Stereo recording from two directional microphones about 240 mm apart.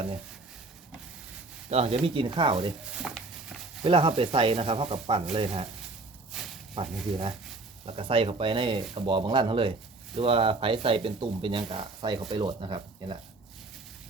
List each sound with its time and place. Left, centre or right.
1.7 s speech: right
2.9 s speech: centre
3.8 s speech: right
6.3 s a sound: centre
6.8 s speech: right